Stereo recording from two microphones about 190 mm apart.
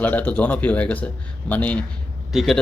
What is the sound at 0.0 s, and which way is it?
Speech, 10° left (ahead or behind).